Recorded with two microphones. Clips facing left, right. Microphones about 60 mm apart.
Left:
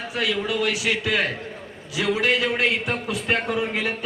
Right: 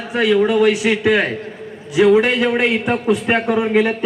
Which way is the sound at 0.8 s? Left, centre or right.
Right.